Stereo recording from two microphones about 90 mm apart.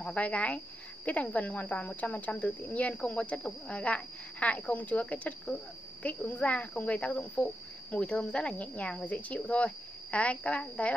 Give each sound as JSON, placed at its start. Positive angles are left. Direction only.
{"t": 0.0, "sound": "speech", "side_deg": 15}